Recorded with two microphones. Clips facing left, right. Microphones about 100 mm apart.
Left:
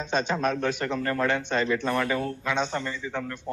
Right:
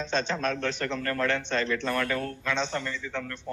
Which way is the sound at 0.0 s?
10° left (ahead or behind).